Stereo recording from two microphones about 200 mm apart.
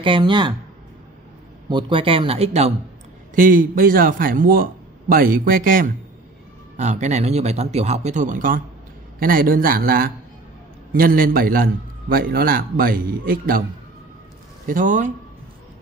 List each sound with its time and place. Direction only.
0.0 s speech: 25° right (ahead or behind)
1.7 s speech: 25° right (ahead or behind)
3.3 s a man's voice: 45° right (ahead or behind)
14.7 s speech: 40° right (ahead or behind)